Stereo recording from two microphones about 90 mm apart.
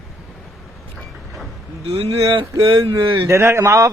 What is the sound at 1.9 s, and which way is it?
Speech, 90° right.